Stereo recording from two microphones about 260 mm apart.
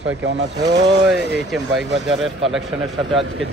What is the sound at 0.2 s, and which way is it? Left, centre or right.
Speech, right.